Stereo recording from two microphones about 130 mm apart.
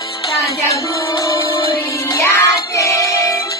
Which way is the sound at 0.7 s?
25° left (ahead or behind).